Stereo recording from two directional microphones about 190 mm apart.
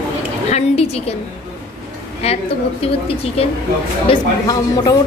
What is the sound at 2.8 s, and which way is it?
Speech, 30° left (ahead or behind).